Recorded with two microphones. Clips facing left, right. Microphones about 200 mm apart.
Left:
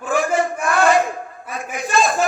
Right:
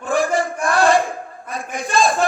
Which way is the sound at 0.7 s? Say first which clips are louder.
Right 1 dB; 30° right (ahead or behind).